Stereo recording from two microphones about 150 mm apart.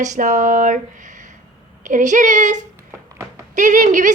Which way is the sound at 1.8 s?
55° right (ahead or behind).